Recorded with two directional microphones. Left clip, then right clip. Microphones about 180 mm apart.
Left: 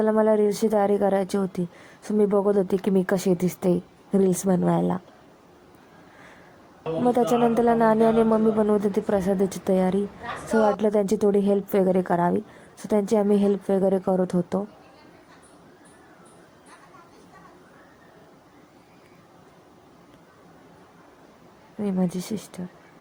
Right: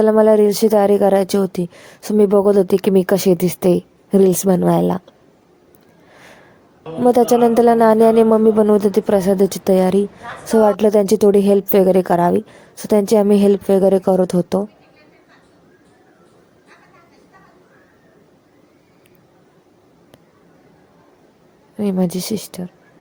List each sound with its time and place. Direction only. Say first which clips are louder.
0.0 s speech: right 9 dB; 40° right (ahead or behind)
7.0 s speech: right 9 dB; 40° right (ahead or behind)
21.8 s speech: right 8 dB; 40° right (ahead or behind)